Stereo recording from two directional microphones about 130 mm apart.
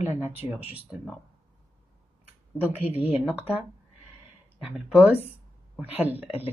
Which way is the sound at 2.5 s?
15° right (ahead or behind).